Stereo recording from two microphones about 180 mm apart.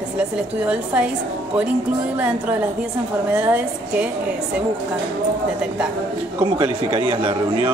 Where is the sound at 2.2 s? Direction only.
10° right (ahead or behind).